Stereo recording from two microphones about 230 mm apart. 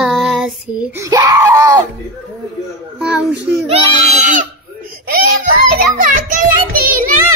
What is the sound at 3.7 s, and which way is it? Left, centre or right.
Speech, right.